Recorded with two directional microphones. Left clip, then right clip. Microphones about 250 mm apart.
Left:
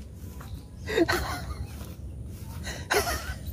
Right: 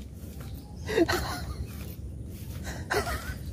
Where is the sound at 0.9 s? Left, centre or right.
Centre.